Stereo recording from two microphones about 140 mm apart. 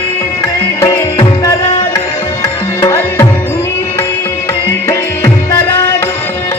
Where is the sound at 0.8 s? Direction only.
25° left (ahead or behind).